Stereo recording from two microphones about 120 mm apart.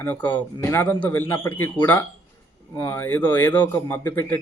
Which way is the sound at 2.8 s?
20° left (ahead or behind).